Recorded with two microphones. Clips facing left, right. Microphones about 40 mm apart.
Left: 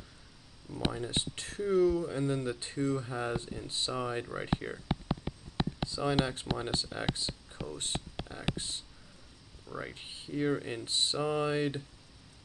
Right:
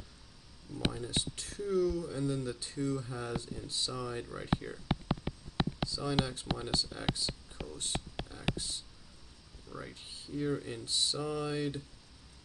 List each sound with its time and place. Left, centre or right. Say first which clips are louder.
0.9 s speech: left 2 dB; left
5.9 s speech: left 3 dB; left